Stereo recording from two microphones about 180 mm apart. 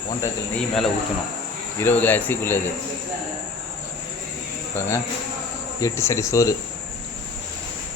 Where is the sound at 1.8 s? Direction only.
10° left (ahead or behind).